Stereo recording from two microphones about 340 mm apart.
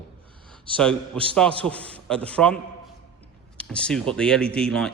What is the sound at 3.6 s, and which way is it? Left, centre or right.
A man's voice, centre.